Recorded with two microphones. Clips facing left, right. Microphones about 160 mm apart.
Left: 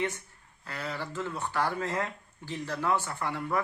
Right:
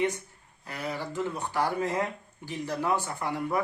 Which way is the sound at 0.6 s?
15° right (ahead or behind).